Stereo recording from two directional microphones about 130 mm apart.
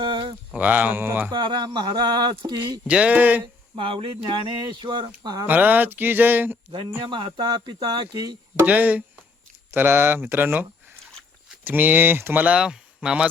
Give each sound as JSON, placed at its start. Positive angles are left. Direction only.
{"t": 0.0, "sound": "a sound", "side_deg": -40}
{"t": 0.5, "sound": "speech", "side_deg": -10}
{"t": 1.3, "sound": "speech", "side_deg": -35}
{"t": 2.8, "sound": "speech", "side_deg": -10}
{"t": 3.4, "sound": "speech", "side_deg": -40}
{"t": 5.5, "sound": "speech", "side_deg": -15}
{"t": 7.1, "sound": "speech", "side_deg": -35}
{"t": 8.5, "sound": "speech", "side_deg": -15}